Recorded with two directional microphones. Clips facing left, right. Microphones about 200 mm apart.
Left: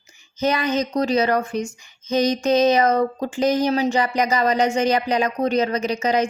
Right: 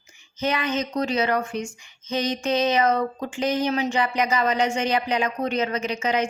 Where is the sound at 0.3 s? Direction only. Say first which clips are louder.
Left 4 dB; 40° left (ahead or behind).